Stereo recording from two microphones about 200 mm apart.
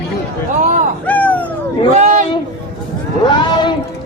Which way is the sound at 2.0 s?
35° right (ahead or behind).